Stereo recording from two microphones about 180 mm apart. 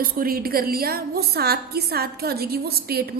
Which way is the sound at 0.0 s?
55° right (ahead or behind).